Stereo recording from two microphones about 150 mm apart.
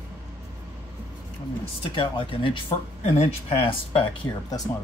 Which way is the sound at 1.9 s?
35° left (ahead or behind).